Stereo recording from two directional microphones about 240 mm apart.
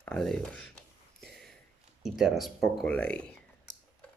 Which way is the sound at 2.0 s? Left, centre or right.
Centre.